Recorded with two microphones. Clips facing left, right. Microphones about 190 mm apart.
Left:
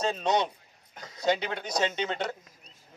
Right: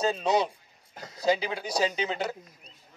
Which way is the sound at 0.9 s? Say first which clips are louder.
Right 2 dB; 30° right (ahead or behind).